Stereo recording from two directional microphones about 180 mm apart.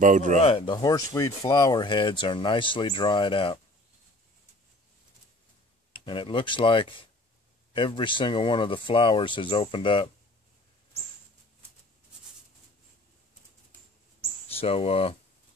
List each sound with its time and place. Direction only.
0.0 s speech: 45° right (ahead or behind)
0.4 s speech: 30° left (ahead or behind)
5.9 s speech: 30° left (ahead or behind)
14.6 s speech: 35° left (ahead or behind)